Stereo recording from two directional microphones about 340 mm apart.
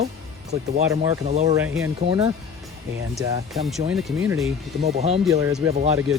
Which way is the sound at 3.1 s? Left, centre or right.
Centre.